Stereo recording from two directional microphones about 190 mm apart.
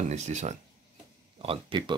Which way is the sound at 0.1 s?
40° right (ahead or behind).